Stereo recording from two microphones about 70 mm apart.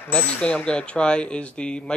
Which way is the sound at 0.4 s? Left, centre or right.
Centre.